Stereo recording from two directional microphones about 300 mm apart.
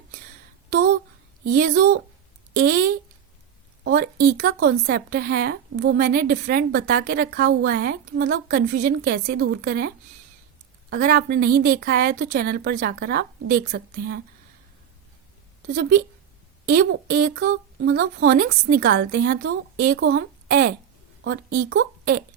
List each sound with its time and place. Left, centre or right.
1.5 s a woman's voice: right
15.7 s speech: right
21.6 s a woman's voice: right